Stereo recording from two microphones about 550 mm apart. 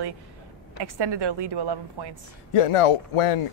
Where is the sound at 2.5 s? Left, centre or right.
Left.